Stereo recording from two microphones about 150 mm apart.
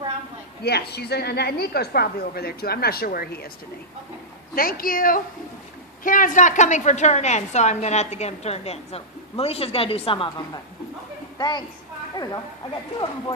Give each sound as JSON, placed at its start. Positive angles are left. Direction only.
{"t": 0.6, "sound": "a woman's voice", "side_deg": 90}
{"t": 4.5, "sound": "a woman's voice", "side_deg": 75}